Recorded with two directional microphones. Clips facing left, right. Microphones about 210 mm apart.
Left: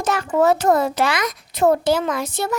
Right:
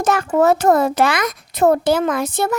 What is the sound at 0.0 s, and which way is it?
A child's voice, 50° right (ahead or behind).